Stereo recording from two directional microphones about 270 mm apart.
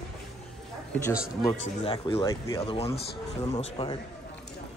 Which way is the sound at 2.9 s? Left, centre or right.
Left.